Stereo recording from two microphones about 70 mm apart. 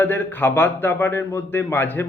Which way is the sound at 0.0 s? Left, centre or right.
Left.